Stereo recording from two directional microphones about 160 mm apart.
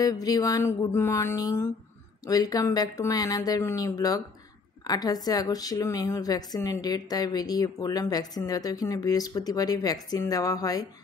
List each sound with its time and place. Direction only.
0.0 s a woman's voice: 25° left (ahead or behind)